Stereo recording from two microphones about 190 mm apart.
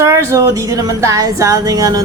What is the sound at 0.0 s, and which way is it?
Music, 15° right (ahead or behind).